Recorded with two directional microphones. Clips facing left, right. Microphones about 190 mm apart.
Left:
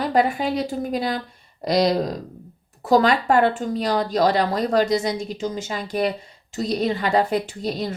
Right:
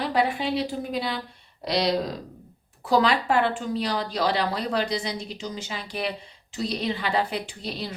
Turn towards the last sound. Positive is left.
turn(degrees=45)  # may be behind; listen again after turning